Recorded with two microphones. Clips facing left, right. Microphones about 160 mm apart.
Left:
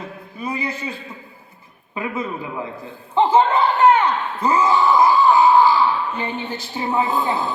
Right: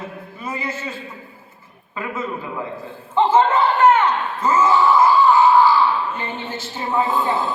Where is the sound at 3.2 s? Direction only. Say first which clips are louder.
Even; 15° left (ahead or behind).